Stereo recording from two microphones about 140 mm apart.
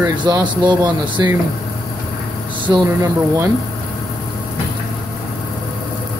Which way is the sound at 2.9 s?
20° right (ahead or behind).